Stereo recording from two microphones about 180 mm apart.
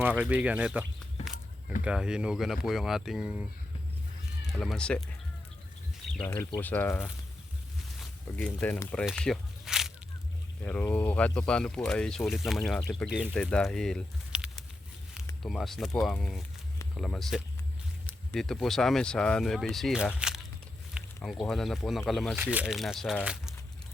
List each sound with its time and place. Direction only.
0.0 s speech: 10° right (ahead or behind)
1.2 s a sound: 35° left (ahead or behind)
1.8 s speech: 5° right (ahead or behind)
4.4 s speech: centre (ahead or behind)
6.2 s speech: 15° left (ahead or behind)
9.0 s a sound: 5° left (ahead or behind)
10.6 s speech: 10° left (ahead or behind)
20.1 s a sound: 5° right (ahead or behind)
21.2 s speech: centre (ahead or behind)